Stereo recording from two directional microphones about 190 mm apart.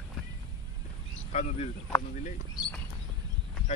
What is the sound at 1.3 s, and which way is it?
Speech, 35° left (ahead or behind).